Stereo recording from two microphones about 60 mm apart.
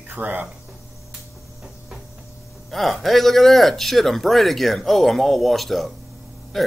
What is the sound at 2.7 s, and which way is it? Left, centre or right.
Speech, centre.